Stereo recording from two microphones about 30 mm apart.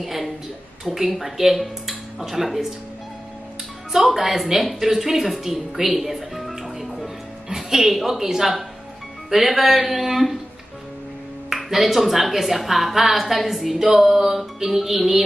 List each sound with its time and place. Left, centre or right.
0.0 s a woman's voice: centre
4.1 s a woman's voice: centre
7.5 s music: centre
7.9 s speech: centre
11.5 s a woman's voice: centre